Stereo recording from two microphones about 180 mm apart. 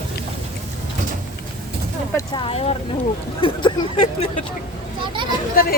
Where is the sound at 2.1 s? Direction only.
30° left (ahead or behind).